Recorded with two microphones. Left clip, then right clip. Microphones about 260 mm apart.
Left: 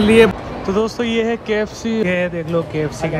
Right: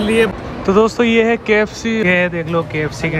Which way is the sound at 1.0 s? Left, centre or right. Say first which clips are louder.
Right 5 dB; left.